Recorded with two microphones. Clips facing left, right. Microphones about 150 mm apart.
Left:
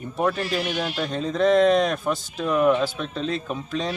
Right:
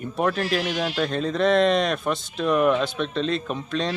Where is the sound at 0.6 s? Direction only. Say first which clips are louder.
Right 1 dB; 90° right.